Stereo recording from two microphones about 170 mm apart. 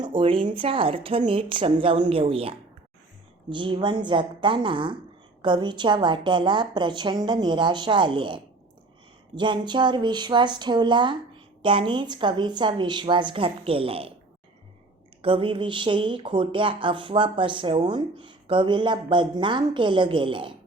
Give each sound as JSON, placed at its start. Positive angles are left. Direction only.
{"t": 0.0, "sound": "a woman's voice", "side_deg": -30}
{"t": 15.2, "sound": "speech", "side_deg": -30}